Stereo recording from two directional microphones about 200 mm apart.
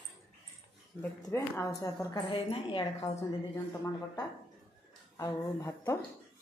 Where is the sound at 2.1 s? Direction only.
25° left (ahead or behind).